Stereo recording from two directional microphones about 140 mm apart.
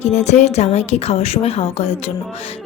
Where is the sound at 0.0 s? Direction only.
55° left (ahead or behind).